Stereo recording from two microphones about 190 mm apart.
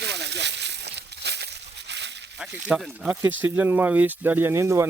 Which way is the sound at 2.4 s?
5° right (ahead or behind).